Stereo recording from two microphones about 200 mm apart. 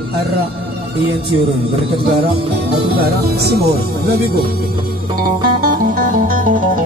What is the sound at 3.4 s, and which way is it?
Speech, 55° right (ahead or behind).